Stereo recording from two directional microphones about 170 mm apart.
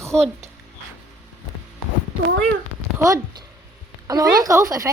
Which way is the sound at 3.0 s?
20° right (ahead or behind).